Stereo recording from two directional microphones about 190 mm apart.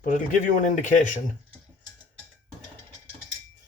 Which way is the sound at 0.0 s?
45° left (ahead or behind).